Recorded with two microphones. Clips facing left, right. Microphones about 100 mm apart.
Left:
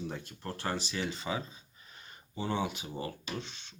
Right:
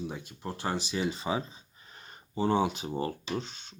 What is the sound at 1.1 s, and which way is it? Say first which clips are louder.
Speech: right 4 dB; 30° right (ahead or behind).